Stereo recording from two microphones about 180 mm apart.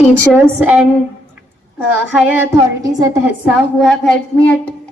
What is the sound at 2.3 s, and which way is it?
Speech, 20° right (ahead or behind).